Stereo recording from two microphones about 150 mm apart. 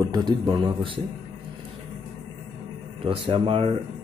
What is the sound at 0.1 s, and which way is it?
Speech, 30° right (ahead or behind).